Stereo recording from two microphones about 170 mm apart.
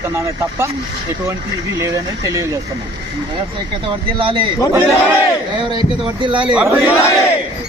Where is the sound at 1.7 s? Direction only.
20° right (ahead or behind).